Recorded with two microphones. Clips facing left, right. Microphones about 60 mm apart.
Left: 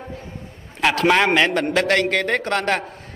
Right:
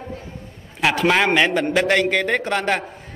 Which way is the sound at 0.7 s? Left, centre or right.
Centre.